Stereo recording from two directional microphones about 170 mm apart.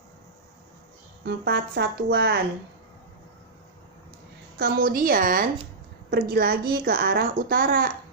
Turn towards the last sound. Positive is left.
turn(degrees=-60)  # may be behind; listen again after turning